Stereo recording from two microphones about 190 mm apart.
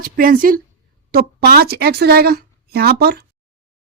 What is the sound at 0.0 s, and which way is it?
A woman's voice, 45° right (ahead or behind).